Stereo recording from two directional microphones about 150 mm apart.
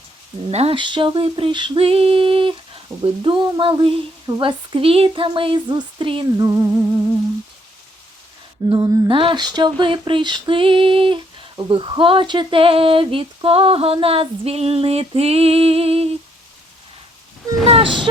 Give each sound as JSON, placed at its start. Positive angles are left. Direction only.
{"t": 0.5, "sound": "speech", "side_deg": -40}
{"t": 6.4, "sound": "music", "side_deg": -20}
{"t": 8.7, "sound": "speech", "side_deg": -25}
{"t": 17.7, "sound": "speech", "side_deg": -35}